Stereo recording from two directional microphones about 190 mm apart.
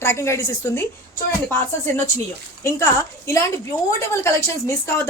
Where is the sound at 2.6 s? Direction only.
15° left (ahead or behind).